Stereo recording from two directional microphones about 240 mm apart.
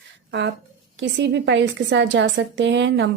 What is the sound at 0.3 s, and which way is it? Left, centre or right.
A woman's voice, right.